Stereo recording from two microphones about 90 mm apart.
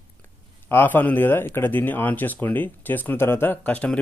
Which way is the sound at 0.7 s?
20° left (ahead or behind).